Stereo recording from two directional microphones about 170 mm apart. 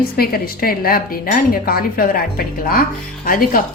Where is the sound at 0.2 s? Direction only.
60° left (ahead or behind).